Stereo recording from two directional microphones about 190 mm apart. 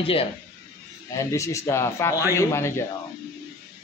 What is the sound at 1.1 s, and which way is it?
Speech, 15° left (ahead or behind).